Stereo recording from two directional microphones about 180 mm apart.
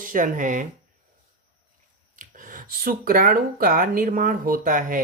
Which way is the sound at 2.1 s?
45° right (ahead or behind).